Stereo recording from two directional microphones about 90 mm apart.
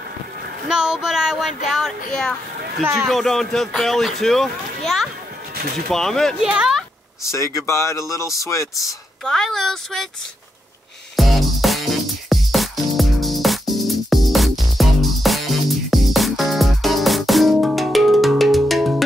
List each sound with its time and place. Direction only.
0.7 s a man's voice: 5° right (ahead or behind)
6.4 s speech: 5° right (ahead or behind)
7.2 s speech: 35° left (ahead or behind)
9.2 s a man's voice: 5° left (ahead or behind)
11.1 s music: centre (ahead or behind)